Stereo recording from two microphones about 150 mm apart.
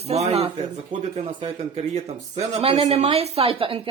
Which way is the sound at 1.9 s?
45° right (ahead or behind).